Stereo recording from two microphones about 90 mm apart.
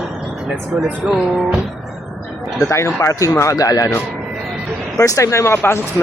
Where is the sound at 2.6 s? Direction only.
30° left (ahead or behind).